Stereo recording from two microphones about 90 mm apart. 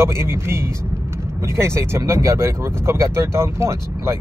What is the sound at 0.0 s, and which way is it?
Speech, 30° right (ahead or behind).